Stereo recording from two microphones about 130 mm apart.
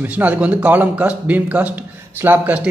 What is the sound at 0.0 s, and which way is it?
Speech, 10° right (ahead or behind).